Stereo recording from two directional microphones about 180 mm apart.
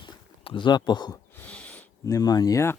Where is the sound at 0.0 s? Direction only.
25° left (ahead or behind).